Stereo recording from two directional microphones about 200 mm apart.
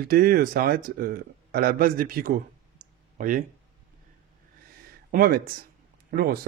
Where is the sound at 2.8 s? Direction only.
40° right (ahead or behind).